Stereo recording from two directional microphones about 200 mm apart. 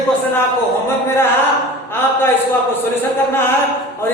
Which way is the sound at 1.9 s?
10° left (ahead or behind).